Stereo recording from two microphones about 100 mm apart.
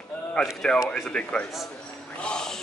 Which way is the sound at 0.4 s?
5° left (ahead or behind).